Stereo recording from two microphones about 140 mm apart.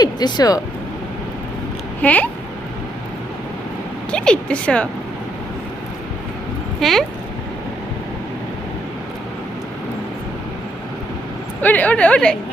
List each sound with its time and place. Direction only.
0.0 s speech: 30° left (ahead or behind)
2.0 s a woman's voice: 10° left (ahead or behind)
4.1 s a woman's voice: 5° left (ahead or behind)
6.7 s speech: centre (ahead or behind)
11.6 s a woman's voice: 10° left (ahead or behind)